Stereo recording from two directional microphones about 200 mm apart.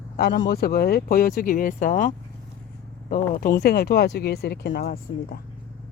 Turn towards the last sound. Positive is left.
turn(degrees=45)  # may be behind; listen again after turning